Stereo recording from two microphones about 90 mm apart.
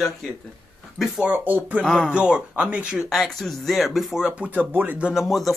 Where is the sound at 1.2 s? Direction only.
20° right (ahead or behind).